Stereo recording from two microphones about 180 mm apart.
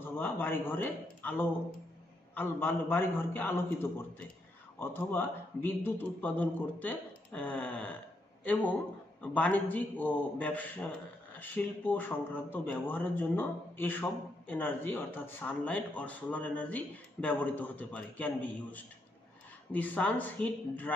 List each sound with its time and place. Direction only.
0.0 s a man's voice: 10° left (ahead or behind)
4.7 s a man's voice: 10° left (ahead or behind)
9.2 s a man's voice: 10° left (ahead or behind)